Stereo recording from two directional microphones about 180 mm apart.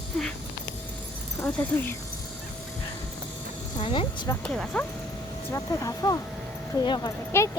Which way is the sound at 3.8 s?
30° left (ahead or behind).